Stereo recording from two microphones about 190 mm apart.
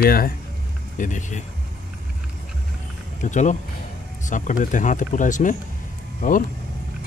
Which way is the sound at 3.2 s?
40° left (ahead or behind).